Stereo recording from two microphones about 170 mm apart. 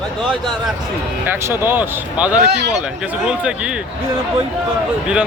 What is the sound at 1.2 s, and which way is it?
Speech, 15° right (ahead or behind).